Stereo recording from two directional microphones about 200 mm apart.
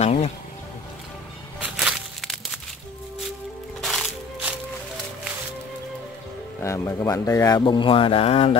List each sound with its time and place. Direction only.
0.0 s music: 35° left (ahead or behind)
1.6 s crushing: 5° right (ahead or behind)
3.8 s music: centre (ahead or behind)
6.6 s speech: 15° left (ahead or behind); by 8.5 s 30° left (ahead or behind)